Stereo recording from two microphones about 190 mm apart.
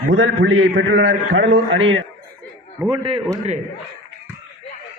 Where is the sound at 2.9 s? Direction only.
25° right (ahead or behind).